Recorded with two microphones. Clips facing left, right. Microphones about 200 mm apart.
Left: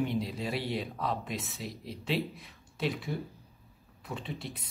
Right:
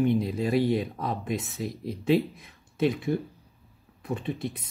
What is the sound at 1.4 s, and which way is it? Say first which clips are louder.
Speech: right 7 dB; centre (ahead or behind).